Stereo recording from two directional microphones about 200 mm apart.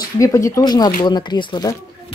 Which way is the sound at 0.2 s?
15° left (ahead or behind).